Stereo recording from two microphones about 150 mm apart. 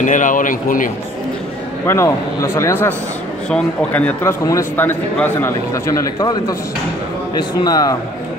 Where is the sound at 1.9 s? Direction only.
20° left (ahead or behind).